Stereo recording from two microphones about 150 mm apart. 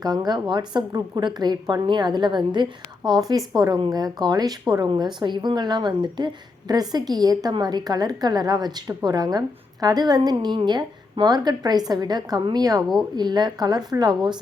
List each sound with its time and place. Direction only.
0.0 s speech: 25° right (ahead or behind)